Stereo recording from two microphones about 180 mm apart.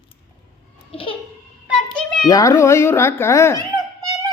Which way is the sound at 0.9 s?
30° left (ahead or behind).